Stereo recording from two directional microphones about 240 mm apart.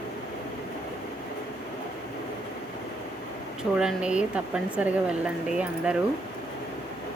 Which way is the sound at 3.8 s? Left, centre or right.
Centre.